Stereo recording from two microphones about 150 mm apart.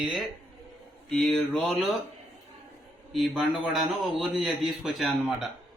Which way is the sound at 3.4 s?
Centre (ahead or behind).